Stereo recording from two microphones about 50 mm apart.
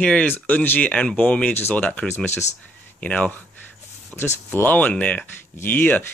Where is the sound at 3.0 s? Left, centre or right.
Left.